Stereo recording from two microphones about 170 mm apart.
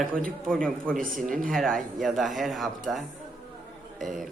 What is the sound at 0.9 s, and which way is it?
Speech, 55° right (ahead or behind).